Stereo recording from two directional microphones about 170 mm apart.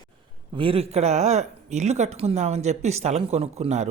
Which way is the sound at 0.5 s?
30° right (ahead or behind).